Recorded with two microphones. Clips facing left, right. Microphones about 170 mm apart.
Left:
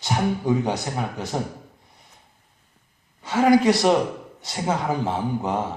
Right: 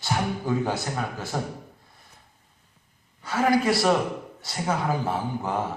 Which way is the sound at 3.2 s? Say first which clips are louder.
Left 5 dB; 25° left (ahead or behind).